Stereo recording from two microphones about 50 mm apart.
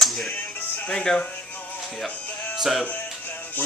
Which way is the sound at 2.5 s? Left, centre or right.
Centre.